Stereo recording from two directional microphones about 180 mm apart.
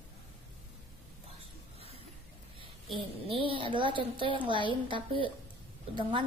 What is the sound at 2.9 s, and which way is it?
A woman's voice, 30° right (ahead or behind).